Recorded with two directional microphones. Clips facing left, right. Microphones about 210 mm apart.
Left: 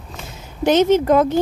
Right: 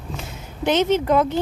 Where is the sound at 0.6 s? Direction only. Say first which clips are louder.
Left 5 dB; 40° left (ahead or behind).